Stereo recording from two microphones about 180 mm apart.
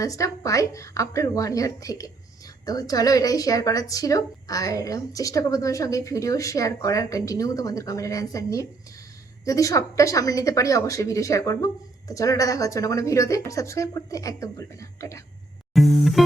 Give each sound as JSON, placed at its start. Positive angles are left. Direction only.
{"t": 0.0, "sound": "a woman's voice", "side_deg": 20}
{"t": 15.7, "sound": "music", "side_deg": 0}